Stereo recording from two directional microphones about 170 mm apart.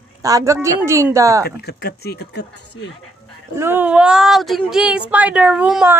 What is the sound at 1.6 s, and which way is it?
Speech, 70° left (ahead or behind).